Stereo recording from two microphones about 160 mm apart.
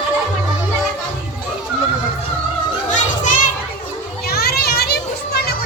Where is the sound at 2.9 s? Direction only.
50° left (ahead or behind).